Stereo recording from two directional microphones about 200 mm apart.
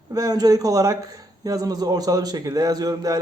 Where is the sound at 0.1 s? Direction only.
20° right (ahead or behind).